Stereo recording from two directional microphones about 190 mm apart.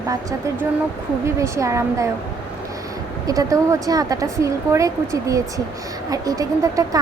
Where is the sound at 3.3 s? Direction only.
15° right (ahead or behind).